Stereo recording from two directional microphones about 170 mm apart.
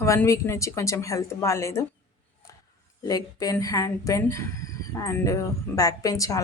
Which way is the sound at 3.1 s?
20° left (ahead or behind).